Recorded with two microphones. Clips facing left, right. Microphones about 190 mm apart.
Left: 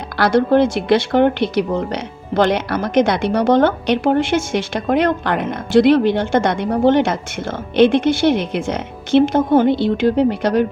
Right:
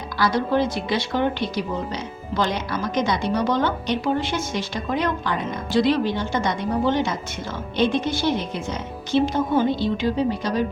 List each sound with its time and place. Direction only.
0.2 s a woman's voice: 70° left (ahead or behind)